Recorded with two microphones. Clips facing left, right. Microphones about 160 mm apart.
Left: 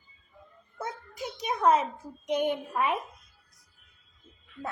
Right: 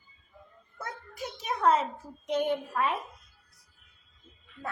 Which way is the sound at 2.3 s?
15° left (ahead or behind).